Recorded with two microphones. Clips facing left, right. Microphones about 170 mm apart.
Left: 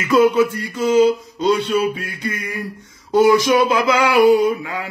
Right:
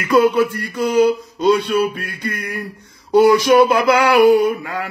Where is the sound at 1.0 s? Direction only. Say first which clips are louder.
Right 1 dB; 55° right (ahead or behind).